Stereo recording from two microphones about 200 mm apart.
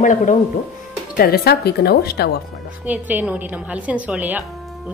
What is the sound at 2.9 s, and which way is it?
A woman's voice, 10° right (ahead or behind).